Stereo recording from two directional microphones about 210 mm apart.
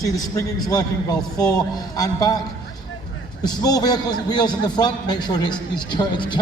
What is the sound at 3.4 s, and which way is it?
A man's voice, 20° left (ahead or behind).